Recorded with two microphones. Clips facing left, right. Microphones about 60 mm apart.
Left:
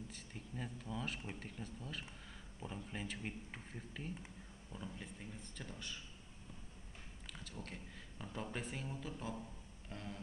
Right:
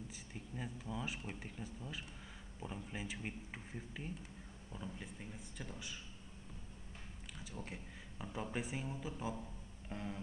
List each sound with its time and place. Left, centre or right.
0.1 s speech: centre
7.6 s speech: centre
9.8 s music: centre